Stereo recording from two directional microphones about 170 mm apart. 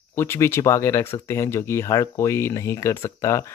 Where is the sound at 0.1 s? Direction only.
15° left (ahead or behind).